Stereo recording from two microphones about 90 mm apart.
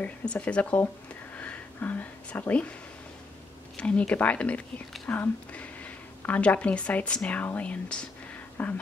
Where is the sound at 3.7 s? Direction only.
15° left (ahead or behind).